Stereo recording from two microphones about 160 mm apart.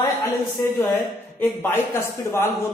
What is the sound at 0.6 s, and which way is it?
A woman's voice, 25° left (ahead or behind).